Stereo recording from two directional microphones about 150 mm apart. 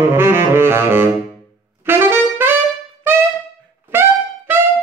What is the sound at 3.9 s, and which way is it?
Music, 15° right (ahead or behind).